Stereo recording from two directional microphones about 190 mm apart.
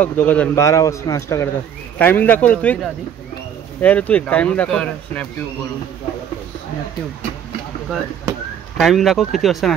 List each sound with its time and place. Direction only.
0.0 s a man's voice: 5° left (ahead or behind)
8.7 s speech: centre (ahead or behind)